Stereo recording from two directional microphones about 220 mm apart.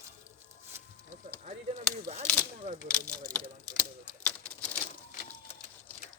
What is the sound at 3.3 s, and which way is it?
Typewriter, 5° left (ahead or behind).